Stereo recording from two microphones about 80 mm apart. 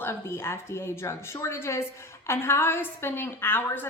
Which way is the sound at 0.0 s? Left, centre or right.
Left.